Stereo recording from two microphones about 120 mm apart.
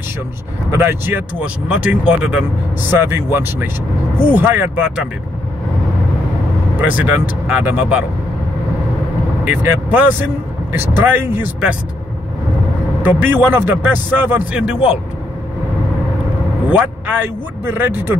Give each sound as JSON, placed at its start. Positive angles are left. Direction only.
{"t": 0.7, "sound": "speech", "side_deg": -20}
{"t": 6.8, "sound": "speech", "side_deg": -10}
{"t": 9.4, "sound": "speech", "side_deg": -15}
{"t": 13.0, "sound": "speech", "side_deg": -15}
{"t": 16.7, "sound": "speech", "side_deg": -15}